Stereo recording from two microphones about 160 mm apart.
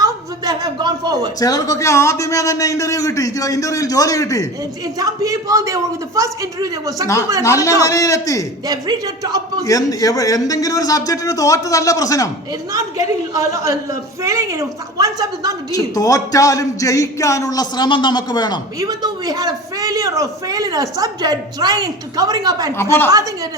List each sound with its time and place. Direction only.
0.0 s a sound: 25° right (ahead or behind)
1.4 s a man's voice: 20° left (ahead or behind)
4.9 s a man's voice: 20° right (ahead or behind)
7.4 s a man's voice: 20° left (ahead or behind)
8.6 s a man's voice: 25° right (ahead or behind)
9.6 s a man's voice: 20° left (ahead or behind)
12.7 s a man's voice: 20° right (ahead or behind)
15.7 s a man's voice: 20° left (ahead or behind)
18.8 s a man's voice: 25° right (ahead or behind)
22.8 s a woman's voice: 15° left (ahead or behind)
23.0 s a man's voice: 20° right (ahead or behind)